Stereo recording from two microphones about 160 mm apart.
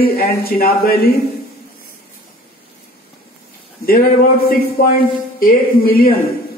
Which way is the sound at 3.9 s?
70° left (ahead or behind).